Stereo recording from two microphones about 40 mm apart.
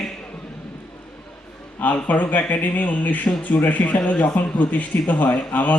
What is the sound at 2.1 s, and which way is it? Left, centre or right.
A man's voice, left.